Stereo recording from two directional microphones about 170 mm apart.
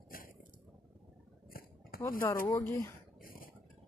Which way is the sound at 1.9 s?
60° left (ahead or behind).